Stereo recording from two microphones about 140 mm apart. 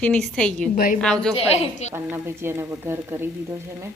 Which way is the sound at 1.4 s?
50° left (ahead or behind).